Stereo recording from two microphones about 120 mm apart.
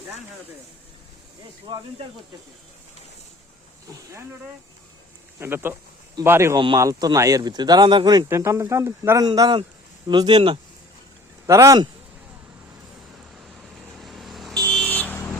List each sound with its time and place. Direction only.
1.7 s speech: 40° right (ahead or behind)
5.4 s speech: 20° right (ahead or behind); by 8.3 s 40° right (ahead or behind)
8.3 s speech: 25° right (ahead or behind); by 10.6 s 45° right (ahead or behind)
11.4 s speech: 25° right (ahead or behind)
14.0 s vehicle: centre (ahead or behind)
14.8 s vehicle: 10° left (ahead or behind)